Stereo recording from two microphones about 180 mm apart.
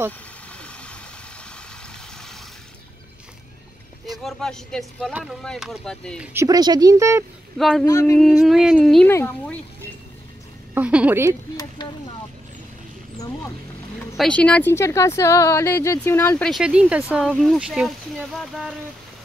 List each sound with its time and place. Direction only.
0.6 s vehicle: 5° left (ahead or behind)
4.2 s speech: centre (ahead or behind)
6.2 s speech: 15° right (ahead or behind)
7.5 s speech: centre (ahead or behind)
7.8 s speech: 15° left (ahead or behind)
8.2 s speech: centre (ahead or behind)
10.7 s a woman's voice: 5° right (ahead or behind)
14.1 s speech: 5° left (ahead or behind)